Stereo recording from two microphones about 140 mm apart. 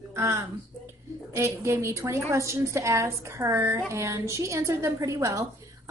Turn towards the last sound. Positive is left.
turn(degrees=-25)  # may be behind; listen again after turning